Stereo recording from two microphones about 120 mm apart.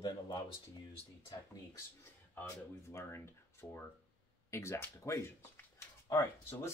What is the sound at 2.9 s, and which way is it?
Speech, 25° left (ahead or behind).